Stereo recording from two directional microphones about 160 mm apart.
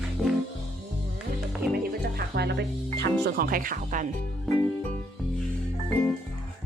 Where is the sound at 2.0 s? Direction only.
90° right; by 4.1 s 55° right (ahead or behind).